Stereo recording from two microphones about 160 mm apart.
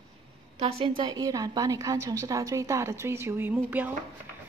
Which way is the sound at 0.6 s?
35° right (ahead or behind).